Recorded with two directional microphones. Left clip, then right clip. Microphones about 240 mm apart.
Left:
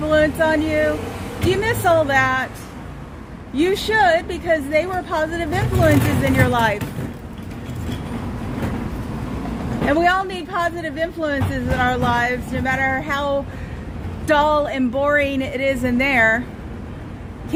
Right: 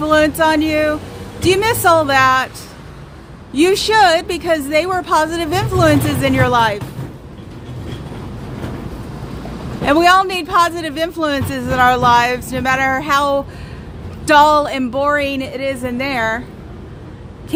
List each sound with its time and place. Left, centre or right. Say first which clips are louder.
0.0 s speech: right 4 dB; right
3.5 s speech: right 6 dB; right
9.9 s speech: right 7 dB; right